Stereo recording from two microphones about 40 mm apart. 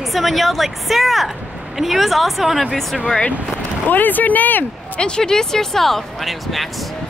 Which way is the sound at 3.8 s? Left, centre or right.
Left.